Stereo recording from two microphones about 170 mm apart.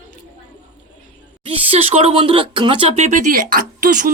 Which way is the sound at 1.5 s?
35° right (ahead or behind).